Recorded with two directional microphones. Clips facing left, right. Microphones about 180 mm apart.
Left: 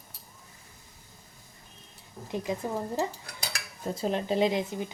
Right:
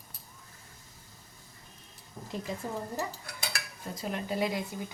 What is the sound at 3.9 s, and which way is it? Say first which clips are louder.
Speech: left 6 dB; 30° left (ahead or behind).